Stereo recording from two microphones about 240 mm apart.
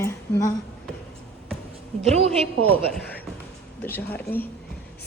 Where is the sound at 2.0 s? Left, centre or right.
Right.